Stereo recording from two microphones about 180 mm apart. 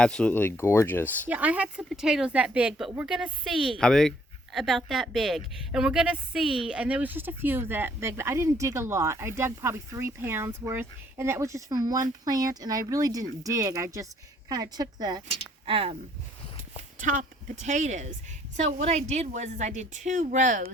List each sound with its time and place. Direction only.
0.0 s speech: 5° left (ahead or behind)
1.3 s a woman's voice: 10° right (ahead or behind); by 16.0 s 30° right (ahead or behind)
17.0 s a woman's voice: 45° right (ahead or behind)